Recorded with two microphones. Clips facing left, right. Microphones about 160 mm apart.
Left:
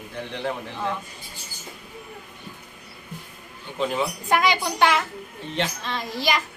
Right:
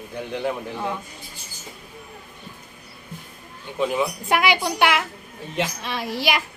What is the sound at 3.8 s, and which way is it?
Speech, 5° right (ahead or behind).